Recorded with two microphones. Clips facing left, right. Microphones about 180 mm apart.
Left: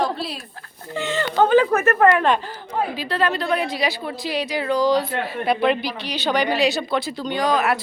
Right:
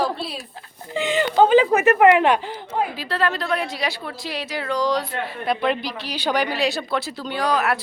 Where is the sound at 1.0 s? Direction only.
15° right (ahead or behind).